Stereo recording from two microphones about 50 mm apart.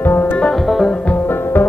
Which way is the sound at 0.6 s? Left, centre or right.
Centre.